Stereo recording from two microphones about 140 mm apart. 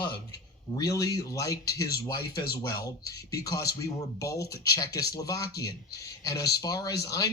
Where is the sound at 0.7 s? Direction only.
25° left (ahead or behind).